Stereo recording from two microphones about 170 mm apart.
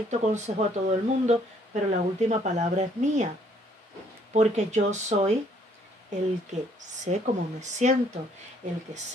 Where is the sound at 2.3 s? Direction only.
45° right (ahead or behind).